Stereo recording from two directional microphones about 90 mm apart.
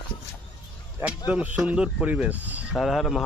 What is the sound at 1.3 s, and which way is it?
Speech, 15° right (ahead or behind).